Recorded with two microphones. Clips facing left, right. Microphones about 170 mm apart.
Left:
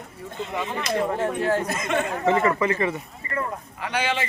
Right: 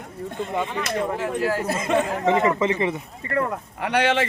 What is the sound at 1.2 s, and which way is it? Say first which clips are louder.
Speech: left 1 dB; 25° left (ahead or behind).